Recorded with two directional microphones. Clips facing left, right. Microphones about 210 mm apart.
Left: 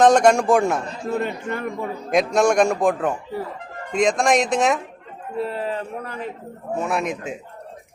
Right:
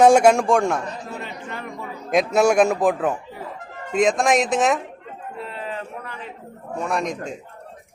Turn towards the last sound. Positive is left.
turn(degrees=5)  # may be behind; listen again after turning